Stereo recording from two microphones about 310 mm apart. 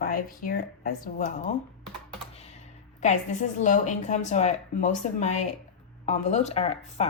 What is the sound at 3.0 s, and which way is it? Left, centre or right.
Speech, left.